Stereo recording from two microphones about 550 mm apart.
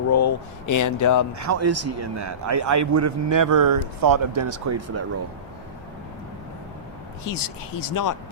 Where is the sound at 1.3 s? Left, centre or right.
Right.